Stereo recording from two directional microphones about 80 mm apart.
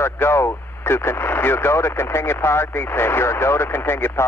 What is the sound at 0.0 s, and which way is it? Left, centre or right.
Vehicle, left.